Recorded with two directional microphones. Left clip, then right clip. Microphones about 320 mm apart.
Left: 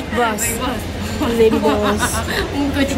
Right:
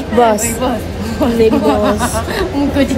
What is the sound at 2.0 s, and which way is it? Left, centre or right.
Speech, right.